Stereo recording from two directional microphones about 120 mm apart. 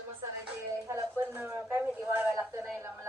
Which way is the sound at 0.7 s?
25° right (ahead or behind).